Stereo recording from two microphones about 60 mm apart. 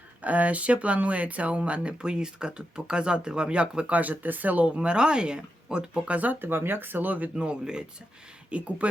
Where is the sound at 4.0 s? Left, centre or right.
Right.